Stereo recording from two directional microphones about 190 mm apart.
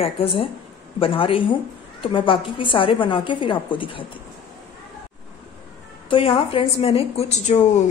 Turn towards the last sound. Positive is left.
turn(degrees=35)  # may be behind; listen again after turning